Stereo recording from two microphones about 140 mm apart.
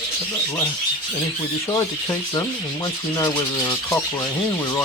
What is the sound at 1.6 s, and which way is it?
Speech, 25° left (ahead or behind).